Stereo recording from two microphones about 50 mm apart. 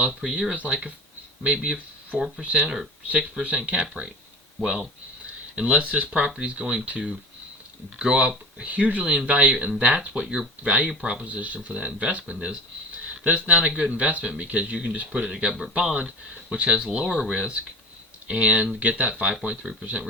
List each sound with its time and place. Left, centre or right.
0.0 s speech: right
0.3 s speech: centre
2.4 s speech: right
4.6 s speech: centre
5.5 s speech: right
13.1 s a sound: right
13.5 s speech: right
15.3 s speech: centre
19.4 s speech: centre